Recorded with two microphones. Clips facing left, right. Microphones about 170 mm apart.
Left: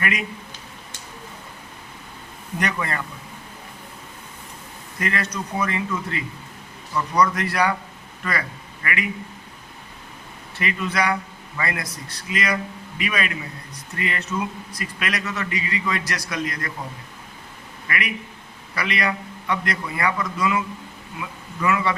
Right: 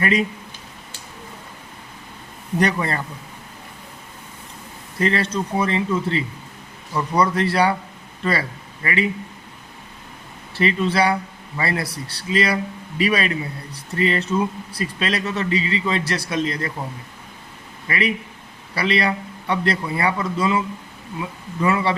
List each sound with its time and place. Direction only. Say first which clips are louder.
0.0 s speech: right 7 dB; 30° right (ahead or behind)
2.6 s speech: right 5 dB; 35° right (ahead or behind)
4.9 s a man's voice: right 6 dB; 30° right (ahead or behind)
10.5 s speech: right 6 dB; 30° right (ahead or behind)
17.8 s speech: right 5 dB; 30° right (ahead or behind)